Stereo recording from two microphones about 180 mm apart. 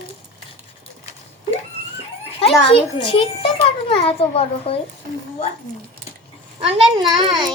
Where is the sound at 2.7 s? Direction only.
30° left (ahead or behind).